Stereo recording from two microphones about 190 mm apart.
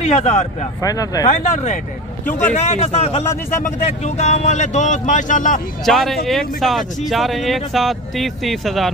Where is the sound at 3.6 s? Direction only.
35° left (ahead or behind).